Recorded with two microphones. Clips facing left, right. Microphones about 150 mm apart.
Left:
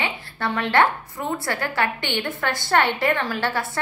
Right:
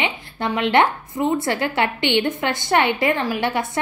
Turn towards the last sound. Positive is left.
turn(degrees=-15)  # may be behind; listen again after turning